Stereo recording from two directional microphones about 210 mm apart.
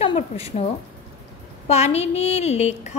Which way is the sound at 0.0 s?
30° left (ahead or behind).